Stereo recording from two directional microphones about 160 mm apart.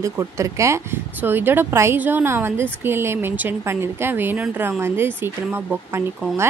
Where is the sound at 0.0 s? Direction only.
20° right (ahead or behind).